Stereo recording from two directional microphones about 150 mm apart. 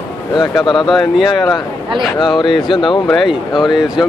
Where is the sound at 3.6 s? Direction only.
30° left (ahead or behind).